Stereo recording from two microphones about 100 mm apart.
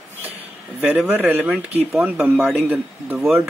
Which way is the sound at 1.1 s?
15° right (ahead or behind).